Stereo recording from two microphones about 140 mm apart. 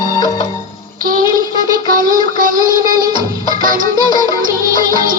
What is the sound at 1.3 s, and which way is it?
Music, 25° right (ahead or behind).